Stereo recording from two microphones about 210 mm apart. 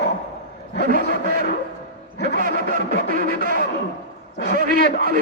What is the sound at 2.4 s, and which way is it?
Speech, 40° right (ahead or behind).